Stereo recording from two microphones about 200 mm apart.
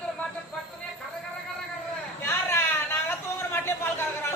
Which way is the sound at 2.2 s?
10° left (ahead or behind).